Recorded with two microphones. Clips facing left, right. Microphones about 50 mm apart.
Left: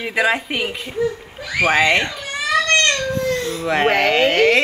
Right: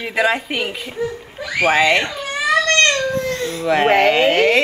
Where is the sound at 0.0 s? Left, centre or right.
Centre.